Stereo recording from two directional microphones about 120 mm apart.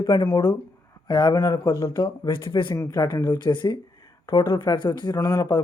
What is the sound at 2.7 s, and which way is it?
Speech, 30° left (ahead or behind).